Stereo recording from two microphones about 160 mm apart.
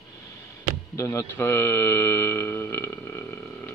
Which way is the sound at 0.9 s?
15° left (ahead or behind).